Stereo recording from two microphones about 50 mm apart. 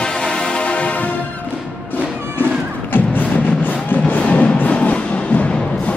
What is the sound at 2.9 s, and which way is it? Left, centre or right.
Music, left.